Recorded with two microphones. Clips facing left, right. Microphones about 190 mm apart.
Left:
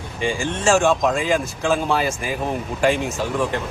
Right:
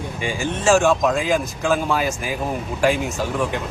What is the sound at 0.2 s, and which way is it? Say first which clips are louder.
Speech: left 3 dB; 5° right (ahead or behind).